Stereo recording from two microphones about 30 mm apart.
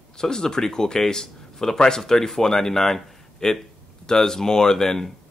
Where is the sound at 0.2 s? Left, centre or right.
Left.